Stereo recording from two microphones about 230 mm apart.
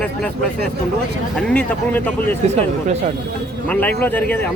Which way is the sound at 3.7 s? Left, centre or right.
Centre.